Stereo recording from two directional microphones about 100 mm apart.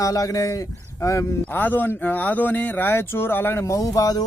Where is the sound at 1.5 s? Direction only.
20° left (ahead or behind).